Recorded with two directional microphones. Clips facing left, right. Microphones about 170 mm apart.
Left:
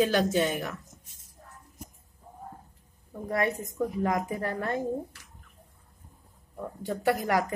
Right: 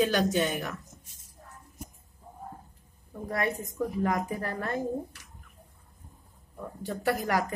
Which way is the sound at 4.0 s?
25° left (ahead or behind).